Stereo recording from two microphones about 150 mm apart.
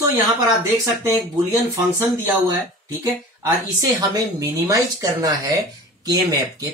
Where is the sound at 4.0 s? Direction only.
25° right (ahead or behind).